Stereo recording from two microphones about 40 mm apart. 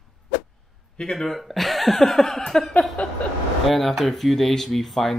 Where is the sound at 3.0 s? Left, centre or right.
Left.